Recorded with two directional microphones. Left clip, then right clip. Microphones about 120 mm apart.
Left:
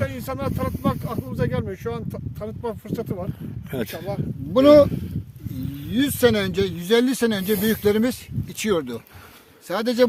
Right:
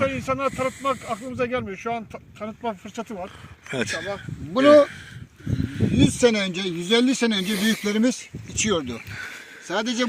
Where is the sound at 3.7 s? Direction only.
55° left (ahead or behind).